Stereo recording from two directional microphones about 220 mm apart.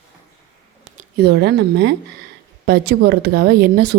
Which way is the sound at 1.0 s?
45° right (ahead or behind).